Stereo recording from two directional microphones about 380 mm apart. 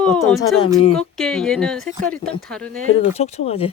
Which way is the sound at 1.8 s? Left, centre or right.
Centre.